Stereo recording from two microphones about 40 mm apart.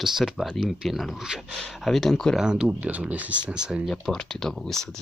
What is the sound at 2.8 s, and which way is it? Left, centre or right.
Speech, right.